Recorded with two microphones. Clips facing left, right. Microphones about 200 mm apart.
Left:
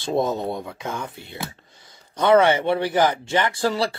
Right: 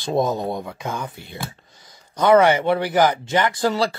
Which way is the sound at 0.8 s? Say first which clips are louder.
Right 1 dB; 25° left (ahead or behind).